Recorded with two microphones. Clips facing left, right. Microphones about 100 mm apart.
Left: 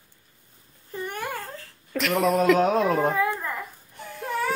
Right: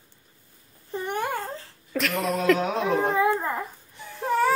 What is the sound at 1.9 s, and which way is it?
Speech, centre (ahead or behind).